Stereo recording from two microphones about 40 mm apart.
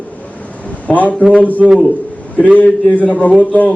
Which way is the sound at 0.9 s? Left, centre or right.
Left.